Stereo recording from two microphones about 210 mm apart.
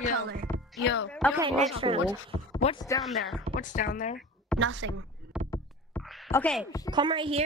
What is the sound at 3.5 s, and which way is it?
Speech, 40° left (ahead or behind).